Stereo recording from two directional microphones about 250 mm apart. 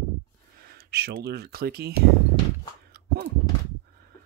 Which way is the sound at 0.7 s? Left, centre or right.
Right.